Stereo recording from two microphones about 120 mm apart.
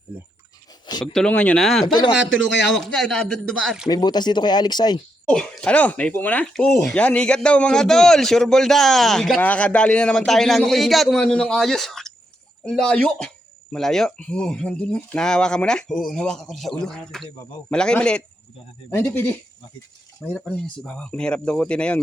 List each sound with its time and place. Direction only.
1.0 s speech: 5° left (ahead or behind)
1.6 s speech: centre (ahead or behind)
1.9 s speech: 35° left (ahead or behind)
2.6 s speech: 5° left (ahead or behind)
3.8 s speech: 35° left (ahead or behind)
5.3 s speech: 5° left (ahead or behind)
19.0 s speech: 20° left (ahead or behind)
20.3 s speech: 5° left (ahead or behind)